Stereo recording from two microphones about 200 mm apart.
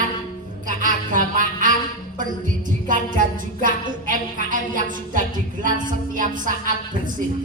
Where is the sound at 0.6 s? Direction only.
40° right (ahead or behind).